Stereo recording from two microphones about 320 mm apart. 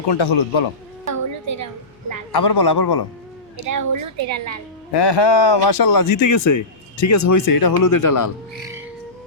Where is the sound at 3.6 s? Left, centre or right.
Right.